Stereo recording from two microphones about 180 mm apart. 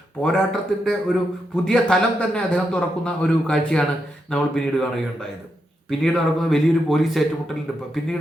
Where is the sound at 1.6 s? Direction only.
5° left (ahead or behind).